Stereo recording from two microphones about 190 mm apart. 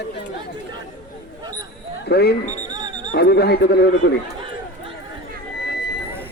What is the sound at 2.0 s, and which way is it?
Speech, 60° left (ahead or behind).